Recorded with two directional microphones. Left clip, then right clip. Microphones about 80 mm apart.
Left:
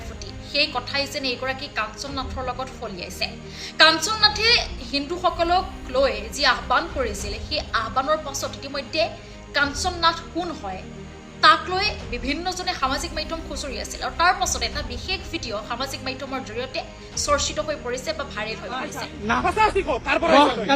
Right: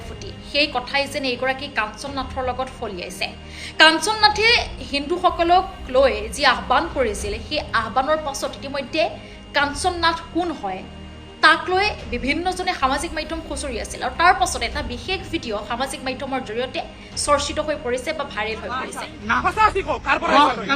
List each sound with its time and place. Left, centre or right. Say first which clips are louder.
0.5 s a woman's voice: right 3 dB; left
19.7 s speech: right 1 dB; right
20.3 s speech: even; left